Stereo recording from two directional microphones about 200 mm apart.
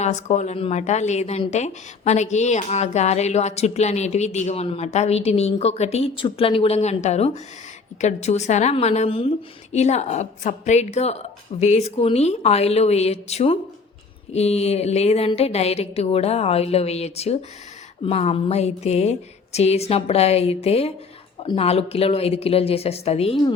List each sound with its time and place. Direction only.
0.0 s a woman's voice: 35° left (ahead or behind)